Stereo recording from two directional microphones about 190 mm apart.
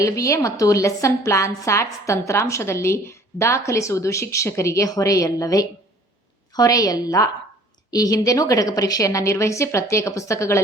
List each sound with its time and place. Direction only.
0.0 s a woman's voice: 15° left (ahead or behind)